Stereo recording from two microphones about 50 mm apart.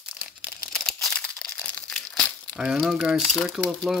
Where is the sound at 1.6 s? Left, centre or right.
Left.